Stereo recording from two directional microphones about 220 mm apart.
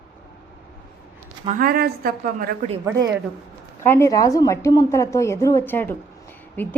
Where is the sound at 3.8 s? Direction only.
10° left (ahead or behind).